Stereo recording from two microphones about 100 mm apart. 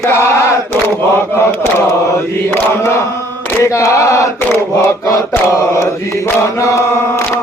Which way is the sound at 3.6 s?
30° left (ahead or behind).